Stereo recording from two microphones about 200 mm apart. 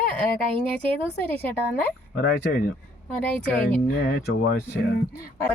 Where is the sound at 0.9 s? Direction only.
10° left (ahead or behind).